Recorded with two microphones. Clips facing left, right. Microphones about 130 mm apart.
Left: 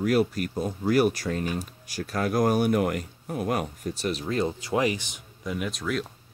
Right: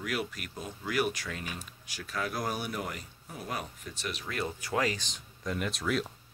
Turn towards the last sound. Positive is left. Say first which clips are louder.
# left 2 dB
turn(degrees=0)  # may be behind; listen again after turning